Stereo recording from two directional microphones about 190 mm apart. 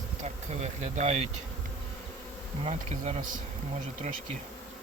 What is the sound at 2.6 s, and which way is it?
Bee, 35° right (ahead or behind).